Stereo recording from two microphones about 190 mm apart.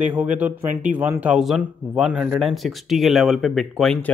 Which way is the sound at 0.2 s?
10° right (ahead or behind).